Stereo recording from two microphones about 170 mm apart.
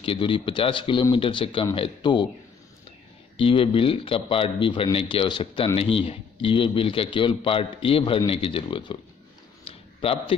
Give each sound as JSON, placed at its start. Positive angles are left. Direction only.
{"t": 0.0, "sound": "speech", "side_deg": 30}
{"t": 3.3, "sound": "speech", "side_deg": 30}
{"t": 9.7, "sound": "a sound", "side_deg": 35}